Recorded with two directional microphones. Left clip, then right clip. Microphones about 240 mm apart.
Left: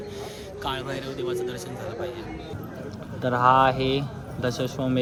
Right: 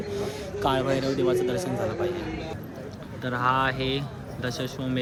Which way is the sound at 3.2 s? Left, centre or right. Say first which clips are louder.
Left 6 dB; centre.